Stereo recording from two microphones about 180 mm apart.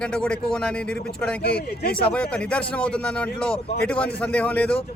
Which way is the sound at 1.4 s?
60° left (ahead or behind).